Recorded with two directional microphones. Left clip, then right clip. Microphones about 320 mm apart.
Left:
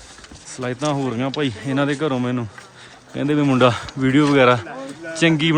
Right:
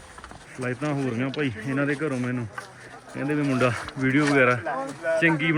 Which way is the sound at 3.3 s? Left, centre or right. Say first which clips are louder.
Left 8 dB; centre.